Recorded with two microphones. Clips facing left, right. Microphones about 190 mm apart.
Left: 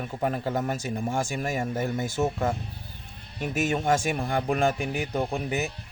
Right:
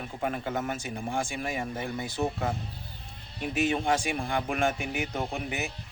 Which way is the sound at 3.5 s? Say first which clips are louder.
Left 2 dB; 45° left (ahead or behind).